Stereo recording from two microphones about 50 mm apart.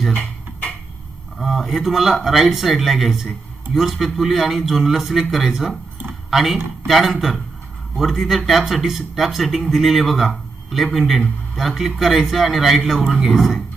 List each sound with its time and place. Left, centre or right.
1.4 s speech: centre